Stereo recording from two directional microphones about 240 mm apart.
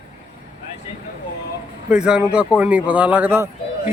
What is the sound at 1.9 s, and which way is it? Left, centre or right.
Speech, centre.